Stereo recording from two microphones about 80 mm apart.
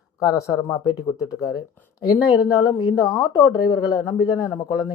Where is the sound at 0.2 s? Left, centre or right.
Left.